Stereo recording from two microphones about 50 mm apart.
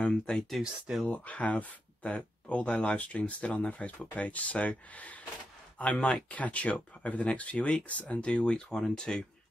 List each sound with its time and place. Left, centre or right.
0.0 s speech: centre
1.0 s speech: left; by 9.2 s centre